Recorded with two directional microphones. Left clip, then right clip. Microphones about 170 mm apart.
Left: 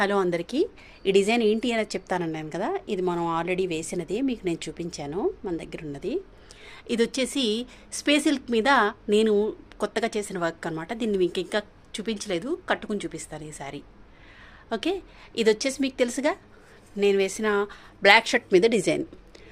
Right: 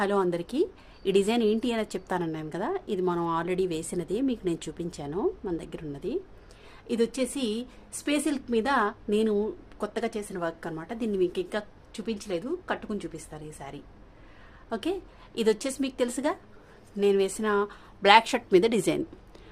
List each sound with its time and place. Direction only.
0.0 s a woman's voice: 10° left (ahead or behind)
6.7 s a woman's voice: 25° left (ahead or behind); by 19.0 s centre (ahead or behind)